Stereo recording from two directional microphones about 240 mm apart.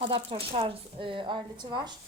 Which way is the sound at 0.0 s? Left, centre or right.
Right.